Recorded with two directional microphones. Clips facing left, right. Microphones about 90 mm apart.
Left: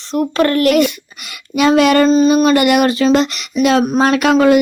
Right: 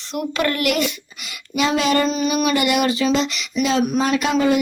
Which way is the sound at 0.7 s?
55° left (ahead or behind).